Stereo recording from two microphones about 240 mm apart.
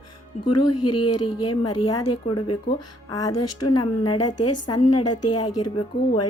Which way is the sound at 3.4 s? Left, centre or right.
Left.